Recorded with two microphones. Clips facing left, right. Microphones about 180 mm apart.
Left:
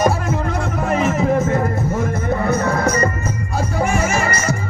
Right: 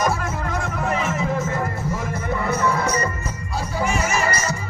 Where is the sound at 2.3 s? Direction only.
45° left (ahead or behind).